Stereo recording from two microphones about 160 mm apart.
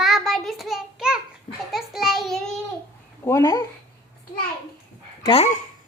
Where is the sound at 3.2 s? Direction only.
20° left (ahead or behind).